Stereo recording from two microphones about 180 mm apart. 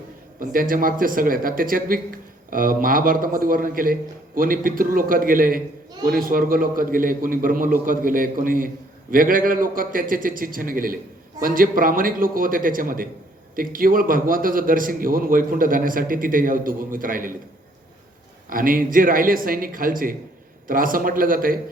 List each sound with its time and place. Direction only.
0.3 s a man's voice: 50° right (ahead or behind)
18.4 s a man's voice: 50° right (ahead or behind)